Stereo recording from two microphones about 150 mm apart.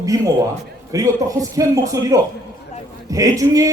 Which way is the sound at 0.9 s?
20° right (ahead or behind).